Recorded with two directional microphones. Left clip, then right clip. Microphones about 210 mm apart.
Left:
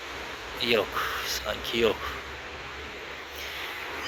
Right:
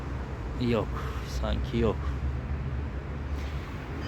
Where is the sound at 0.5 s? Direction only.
Centre (ahead or behind).